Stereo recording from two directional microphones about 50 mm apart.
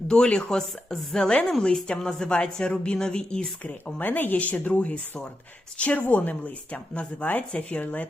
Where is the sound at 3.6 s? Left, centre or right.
Left.